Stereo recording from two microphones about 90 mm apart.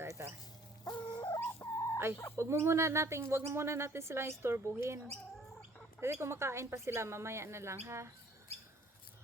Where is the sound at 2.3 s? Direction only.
30° right (ahead or behind).